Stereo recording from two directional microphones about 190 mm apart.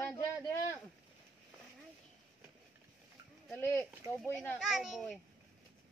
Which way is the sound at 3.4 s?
10° left (ahead or behind).